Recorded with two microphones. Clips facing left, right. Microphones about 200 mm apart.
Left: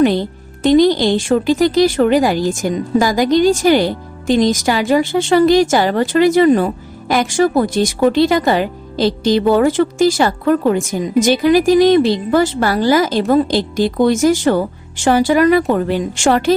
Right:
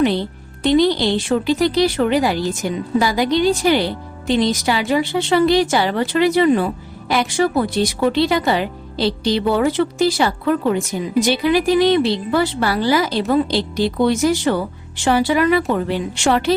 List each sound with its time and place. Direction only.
0.0 s speech: 45° left (ahead or behind)